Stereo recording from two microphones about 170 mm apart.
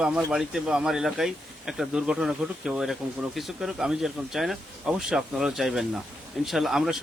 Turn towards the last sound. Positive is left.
turn(degrees=0)  # may be behind; listen again after turning